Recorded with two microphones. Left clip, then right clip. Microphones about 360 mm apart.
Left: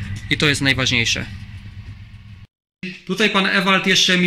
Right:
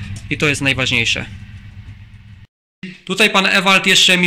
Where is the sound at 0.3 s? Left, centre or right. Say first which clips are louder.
Right 1 dB; centre.